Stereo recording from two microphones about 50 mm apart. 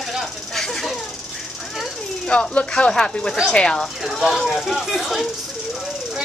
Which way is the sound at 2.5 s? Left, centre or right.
Centre.